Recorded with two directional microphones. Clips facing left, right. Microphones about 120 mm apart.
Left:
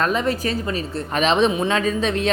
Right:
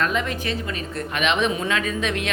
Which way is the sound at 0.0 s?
35° left (ahead or behind).